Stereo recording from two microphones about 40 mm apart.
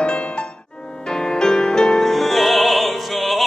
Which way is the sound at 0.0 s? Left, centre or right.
Left.